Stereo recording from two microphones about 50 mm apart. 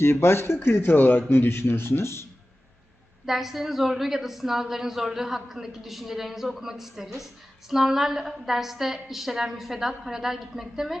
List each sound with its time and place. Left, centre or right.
0.0 s speech: left
3.2 s a woman's voice: centre